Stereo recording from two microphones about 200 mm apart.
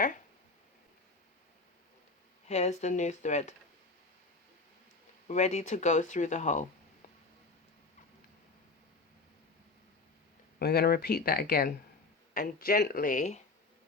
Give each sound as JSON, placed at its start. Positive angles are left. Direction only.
{"t": 2.5, "sound": "speech", "side_deg": 35}
{"t": 5.3, "sound": "speech", "side_deg": 35}
{"t": 10.6, "sound": "speech", "side_deg": 50}